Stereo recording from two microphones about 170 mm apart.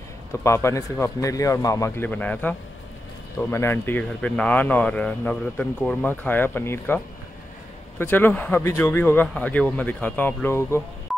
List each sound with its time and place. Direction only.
0.3 s speech: 15° left (ahead or behind)
8.0 s speech: 10° left (ahead or behind)